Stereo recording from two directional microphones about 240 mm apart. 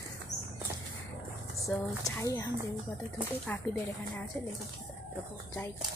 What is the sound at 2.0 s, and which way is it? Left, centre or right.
Speech, centre.